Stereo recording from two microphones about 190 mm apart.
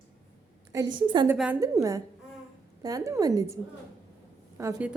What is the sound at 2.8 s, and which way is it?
Speech, 20° right (ahead or behind).